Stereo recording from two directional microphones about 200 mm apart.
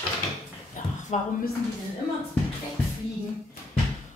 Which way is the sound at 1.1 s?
35° left (ahead or behind).